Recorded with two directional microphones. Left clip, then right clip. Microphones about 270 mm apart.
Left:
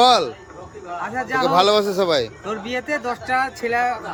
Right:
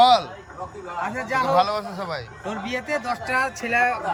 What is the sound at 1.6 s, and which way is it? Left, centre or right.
Speech, left.